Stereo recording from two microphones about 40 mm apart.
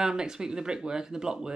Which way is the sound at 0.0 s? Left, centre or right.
Centre.